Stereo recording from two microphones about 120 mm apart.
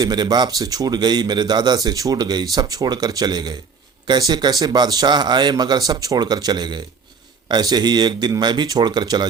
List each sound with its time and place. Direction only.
0.0 s a man's voice: 35° right (ahead or behind)